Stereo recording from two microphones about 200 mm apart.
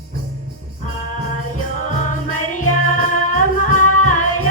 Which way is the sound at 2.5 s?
40° left (ahead or behind).